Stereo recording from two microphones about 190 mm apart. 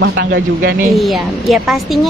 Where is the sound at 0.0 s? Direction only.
60° right (ahead or behind).